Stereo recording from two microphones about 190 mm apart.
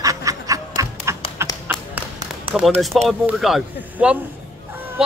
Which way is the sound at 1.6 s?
5° right (ahead or behind).